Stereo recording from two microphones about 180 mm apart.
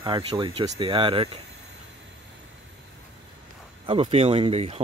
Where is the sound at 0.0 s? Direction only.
25° right (ahead or behind).